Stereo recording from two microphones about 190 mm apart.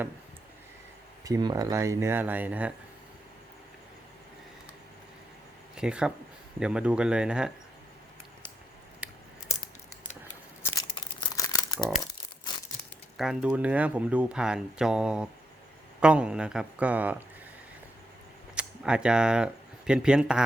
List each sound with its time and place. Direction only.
1.2 s speech: 20° right (ahead or behind)
5.7 s speech: 5° right (ahead or behind)
10.6 s crumpling: 20° left (ahead or behind)
13.1 s speech: 5° right (ahead or behind)
18.5 s speech: 5° right (ahead or behind)